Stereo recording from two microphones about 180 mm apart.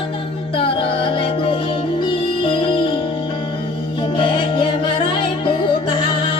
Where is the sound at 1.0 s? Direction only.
30° left (ahead or behind).